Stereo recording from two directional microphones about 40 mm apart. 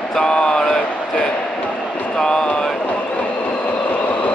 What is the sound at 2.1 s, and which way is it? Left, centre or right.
Vehicle, left.